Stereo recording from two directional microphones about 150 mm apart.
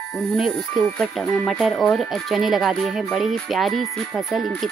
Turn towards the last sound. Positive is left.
turn(degrees=0)  # may be behind; listen again after turning